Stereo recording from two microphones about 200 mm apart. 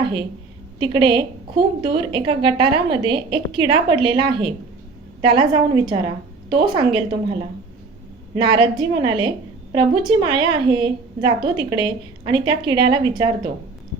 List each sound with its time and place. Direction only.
0.0 s a woman's voice: 25° right (ahead or behind)
8.4 s a woman's voice: 25° right (ahead or behind)